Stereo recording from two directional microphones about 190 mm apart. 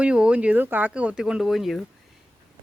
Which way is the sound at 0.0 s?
5° right (ahead or behind).